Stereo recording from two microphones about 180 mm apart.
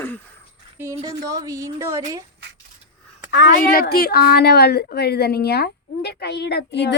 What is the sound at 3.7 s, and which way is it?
A woman's voice, 55° left (ahead or behind).